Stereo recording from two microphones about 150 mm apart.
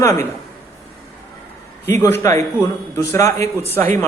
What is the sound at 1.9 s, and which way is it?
A man's voice, 15° left (ahead or behind).